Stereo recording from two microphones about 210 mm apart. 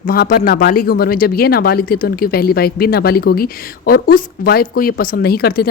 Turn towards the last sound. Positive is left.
turn(degrees=45)  # may be behind; listen again after turning